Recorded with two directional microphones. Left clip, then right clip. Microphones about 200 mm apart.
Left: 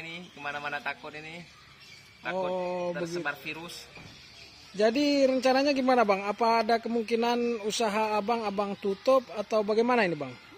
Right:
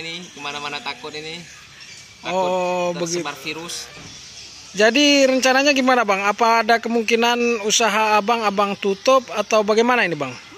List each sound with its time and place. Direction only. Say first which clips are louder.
0.4 s speech: right 5 dB; 30° left (ahead or behind)
2.5 s speech: right 10 dB; centre (ahead or behind)
4.7 s speech: right 10 dB; 5° left (ahead or behind)